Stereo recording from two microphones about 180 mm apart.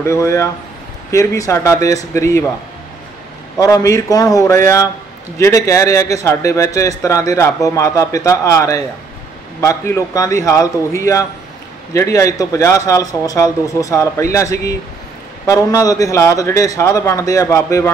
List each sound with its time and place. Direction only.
0.0 s a man's voice: 15° left (ahead or behind)
3.5 s a man's voice: 20° left (ahead or behind)